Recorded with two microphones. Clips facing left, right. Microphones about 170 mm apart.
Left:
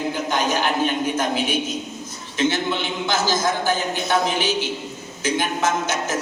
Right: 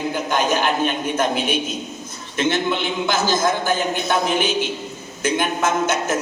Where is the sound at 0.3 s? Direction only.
50° right (ahead or behind).